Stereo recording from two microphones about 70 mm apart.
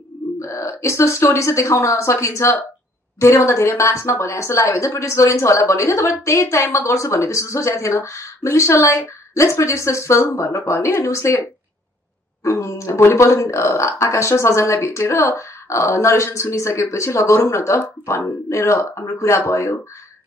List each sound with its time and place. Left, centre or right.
0.4 s speech: left
12.4 s speech: left